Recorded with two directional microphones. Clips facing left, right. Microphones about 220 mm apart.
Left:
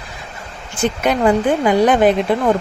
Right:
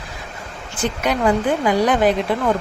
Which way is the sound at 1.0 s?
25° left (ahead or behind).